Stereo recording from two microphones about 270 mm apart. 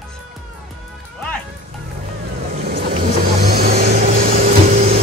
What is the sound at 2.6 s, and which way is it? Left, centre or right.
Vehicle, right.